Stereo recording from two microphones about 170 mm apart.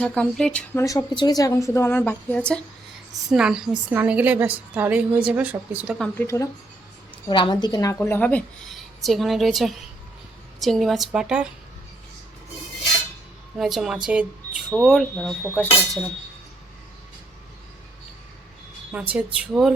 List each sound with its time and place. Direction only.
0.0 s speech: 5° left (ahead or behind)
3.2 s a woman's voice: 5° right (ahead or behind)
6.1 s speech: 15° left (ahead or behind)
7.3 s a woman's voice: 30° left (ahead or behind)
7.9 s speech: 10° left (ahead or behind); by 11.4 s 5° right (ahead or behind)
13.6 s speech: centre (ahead or behind)
18.9 s a woman's voice: 10° right (ahead or behind)